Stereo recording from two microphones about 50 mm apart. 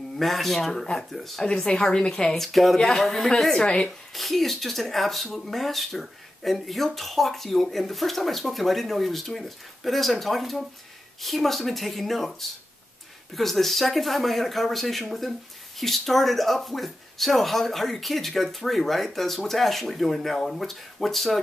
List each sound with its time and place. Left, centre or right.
0.2 s speech: centre
3.6 s speech: centre
4.1 s speech: centre